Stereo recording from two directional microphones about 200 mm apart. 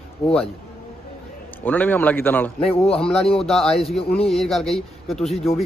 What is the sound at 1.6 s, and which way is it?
Speech, 10° left (ahead or behind).